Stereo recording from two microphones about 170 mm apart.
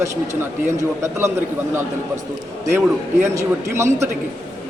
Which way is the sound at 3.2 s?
15° right (ahead or behind).